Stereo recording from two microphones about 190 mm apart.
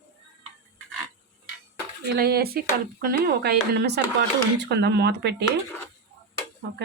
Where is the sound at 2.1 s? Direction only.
55° right (ahead or behind).